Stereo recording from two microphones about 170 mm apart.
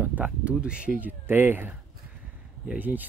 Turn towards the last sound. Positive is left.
turn(degrees=-10)  # may be behind; listen again after turning